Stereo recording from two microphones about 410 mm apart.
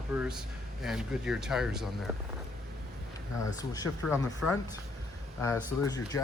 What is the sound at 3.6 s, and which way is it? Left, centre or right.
Speech, centre.